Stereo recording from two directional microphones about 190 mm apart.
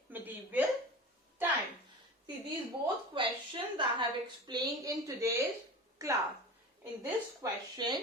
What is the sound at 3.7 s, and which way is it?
A woman's voice, 25° right (ahead or behind).